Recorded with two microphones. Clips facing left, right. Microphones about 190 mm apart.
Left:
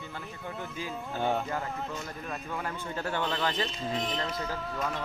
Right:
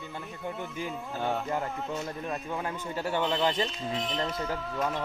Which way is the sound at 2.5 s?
15° right (ahead or behind).